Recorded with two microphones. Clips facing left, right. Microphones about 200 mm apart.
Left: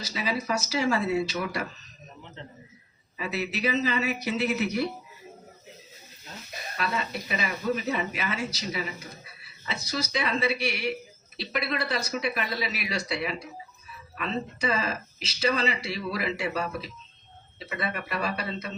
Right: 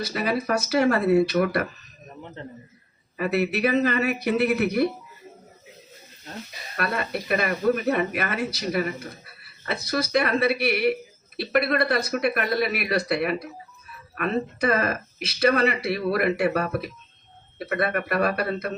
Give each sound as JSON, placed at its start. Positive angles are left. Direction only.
{"t": 0.0, "sound": "speech", "side_deg": -60}
{"t": 6.7, "sound": "speech", "side_deg": -60}